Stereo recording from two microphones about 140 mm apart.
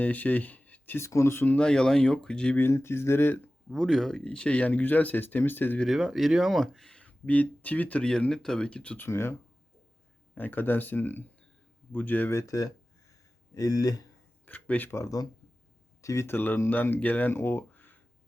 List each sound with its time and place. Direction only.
0.0 s speech: 10° left (ahead or behind)
3.7 s speech: centre (ahead or behind)
5.8 s speech: centre (ahead or behind); by 9.3 s 20° left (ahead or behind)
10.3 s speech: 15° left (ahead or behind)
14.4 s speech: 10° left (ahead or behind)